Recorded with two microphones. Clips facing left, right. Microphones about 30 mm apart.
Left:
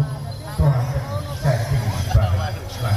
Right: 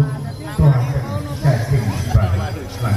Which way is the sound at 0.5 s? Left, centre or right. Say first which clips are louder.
Right 4 dB; right.